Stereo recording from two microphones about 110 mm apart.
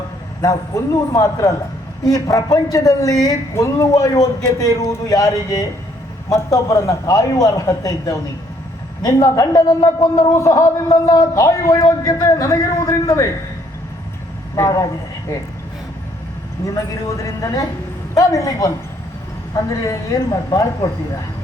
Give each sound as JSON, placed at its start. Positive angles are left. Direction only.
{"t": 0.4, "sound": "a man's voice", "side_deg": 35}
{"t": 14.5, "sound": "a man's voice", "side_deg": 30}
{"t": 16.6, "sound": "a man's voice", "side_deg": 30}
{"t": 19.8, "sound": "a man's voice", "side_deg": 30}